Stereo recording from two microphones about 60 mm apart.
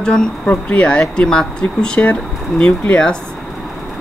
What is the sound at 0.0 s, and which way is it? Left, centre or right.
Speech, centre.